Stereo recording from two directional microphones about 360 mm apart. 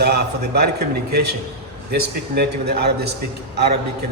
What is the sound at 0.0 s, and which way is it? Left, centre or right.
A man's voice, right.